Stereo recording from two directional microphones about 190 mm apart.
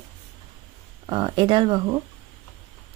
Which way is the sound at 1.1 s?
25° right (ahead or behind).